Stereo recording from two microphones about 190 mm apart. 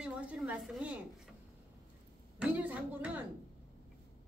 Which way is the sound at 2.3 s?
10° right (ahead or behind).